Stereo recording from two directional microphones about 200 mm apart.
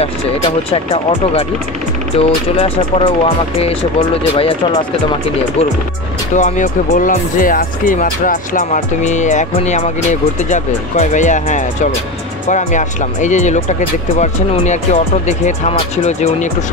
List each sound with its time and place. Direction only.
0.7 s speech: 30° left (ahead or behind)
6.3 s speech: 40° left (ahead or behind)